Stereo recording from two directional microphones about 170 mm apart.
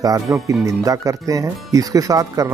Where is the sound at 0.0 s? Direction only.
20° right (ahead or behind).